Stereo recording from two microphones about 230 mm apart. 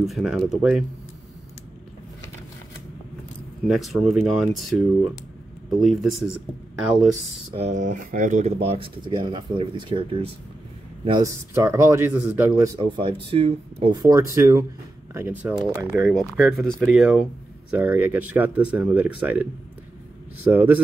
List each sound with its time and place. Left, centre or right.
0.0 s speech: centre
3.6 s speech: centre
7.5 s speech: right
14.0 s speech: centre
16.1 s speech: centre
20.5 s speech: centre